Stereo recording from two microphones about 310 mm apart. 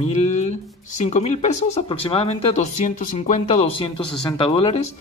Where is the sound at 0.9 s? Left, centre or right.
Left.